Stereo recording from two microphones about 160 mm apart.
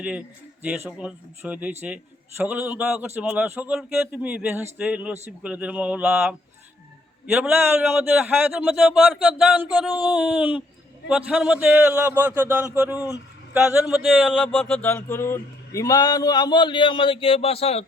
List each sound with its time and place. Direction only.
0.0 s speech: 5° right (ahead or behind)
14.8 s speech: 15° left (ahead or behind); by 17.8 s 40° left (ahead or behind)